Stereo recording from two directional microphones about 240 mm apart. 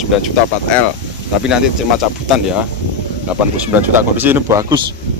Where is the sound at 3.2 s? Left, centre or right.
Centre.